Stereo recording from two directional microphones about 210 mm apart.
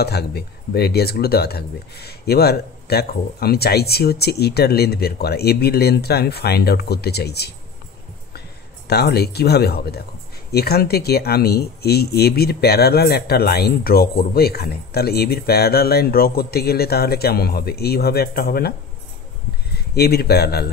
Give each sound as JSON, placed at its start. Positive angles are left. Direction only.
{"t": 0.0, "sound": "speech", "side_deg": 50}
{"t": 8.8, "sound": "speech", "side_deg": 50}
{"t": 19.7, "sound": "speech", "side_deg": 50}